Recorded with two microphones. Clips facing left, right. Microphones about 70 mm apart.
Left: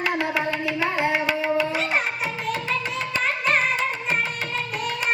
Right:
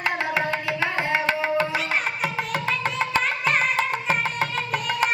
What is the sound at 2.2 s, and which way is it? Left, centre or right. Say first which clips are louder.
Music: right 1 dB; right.